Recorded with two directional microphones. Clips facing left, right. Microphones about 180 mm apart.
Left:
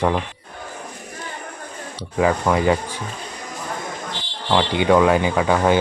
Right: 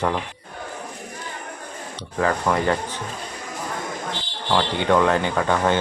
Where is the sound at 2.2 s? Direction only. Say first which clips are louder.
Left 3 dB; 10° left (ahead or behind).